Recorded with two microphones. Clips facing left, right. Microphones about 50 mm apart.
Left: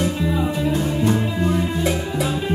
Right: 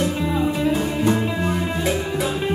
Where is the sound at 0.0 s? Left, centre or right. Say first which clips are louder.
Even; centre.